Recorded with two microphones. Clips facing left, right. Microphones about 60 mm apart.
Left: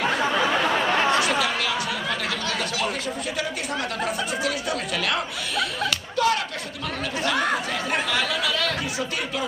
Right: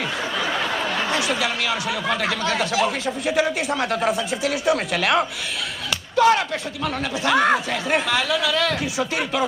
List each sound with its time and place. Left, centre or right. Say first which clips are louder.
0.8 s chatter: left 2 dB; left
2.4 s speech: right 5 dB; right
6.1 s speech: right 7 dB; right